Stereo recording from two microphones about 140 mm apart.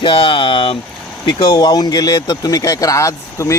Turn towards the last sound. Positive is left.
turn(degrees=20)  # may be behind; listen again after turning